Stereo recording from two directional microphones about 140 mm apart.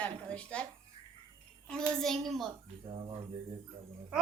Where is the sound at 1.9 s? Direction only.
5° left (ahead or behind).